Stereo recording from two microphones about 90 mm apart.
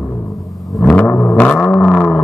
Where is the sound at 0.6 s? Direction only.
Centre (ahead or behind).